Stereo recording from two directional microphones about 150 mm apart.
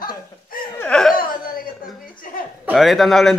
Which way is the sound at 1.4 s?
70° left (ahead or behind).